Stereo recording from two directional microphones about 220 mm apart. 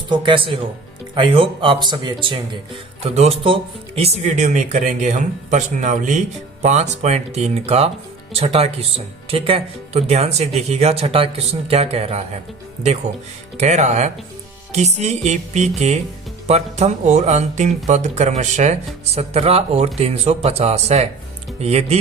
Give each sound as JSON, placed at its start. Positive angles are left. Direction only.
{"t": 0.1, "sound": "speech", "side_deg": -20}
{"t": 13.6, "sound": "speech", "side_deg": -30}